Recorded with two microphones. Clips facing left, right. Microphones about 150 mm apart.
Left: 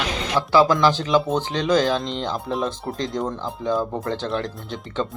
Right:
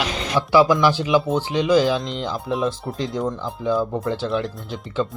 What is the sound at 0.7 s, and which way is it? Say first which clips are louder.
Speech: right 1 dB; 10° right (ahead or behind).